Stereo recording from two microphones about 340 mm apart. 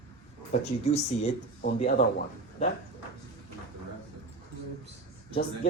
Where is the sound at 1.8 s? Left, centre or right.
Left.